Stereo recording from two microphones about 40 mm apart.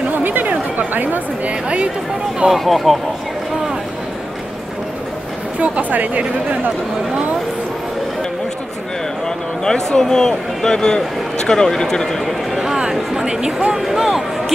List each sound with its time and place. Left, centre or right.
0.1 s chatter: right
0.7 s speech: right
2.5 s speech: centre
5.6 s speech: right
9.7 s a man's voice: centre
12.5 s speech: centre
13.7 s speech: centre